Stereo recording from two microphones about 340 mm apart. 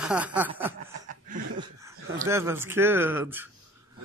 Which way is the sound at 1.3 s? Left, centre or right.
Centre.